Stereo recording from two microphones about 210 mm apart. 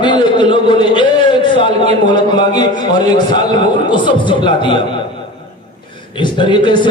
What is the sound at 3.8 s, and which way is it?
Speech, 20° left (ahead or behind).